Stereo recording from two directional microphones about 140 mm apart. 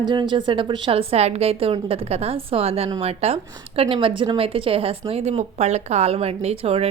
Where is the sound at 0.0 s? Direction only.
35° right (ahead or behind).